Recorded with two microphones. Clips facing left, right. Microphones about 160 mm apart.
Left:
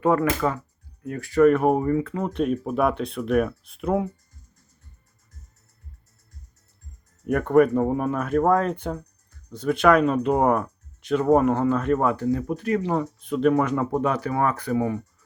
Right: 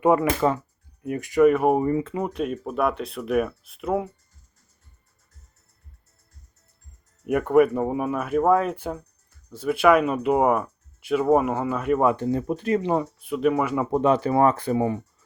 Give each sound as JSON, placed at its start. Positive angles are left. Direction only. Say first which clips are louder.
{"t": 0.0, "sound": "speech", "louder": "right 2 dB", "side_deg": -15}
{"t": 1.8, "sound": "speech", "louder": "even", "side_deg": -20}
{"t": 2.2, "sound": "speech", "louder": "left 3 dB", "side_deg": 0}
{"t": 7.3, "sound": "speech", "louder": "even", "side_deg": -5}
{"t": 12.1, "sound": "speech", "louder": "even", "side_deg": -25}
{"t": 13.1, "sound": "speech", "louder": "left 2 dB", "side_deg": -5}
{"t": 14.0, "sound": "speech", "louder": "right 4 dB", "side_deg": -25}